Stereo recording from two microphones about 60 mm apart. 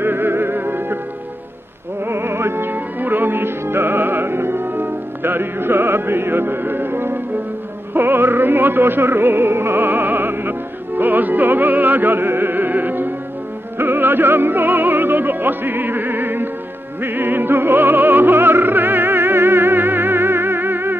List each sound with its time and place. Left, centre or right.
0.0 s music: right
2.0 s music: right